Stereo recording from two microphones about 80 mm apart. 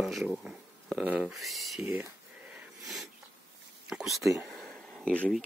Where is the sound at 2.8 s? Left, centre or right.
Centre.